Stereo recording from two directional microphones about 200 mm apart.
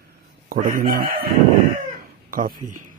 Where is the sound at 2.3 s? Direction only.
45° right (ahead or behind).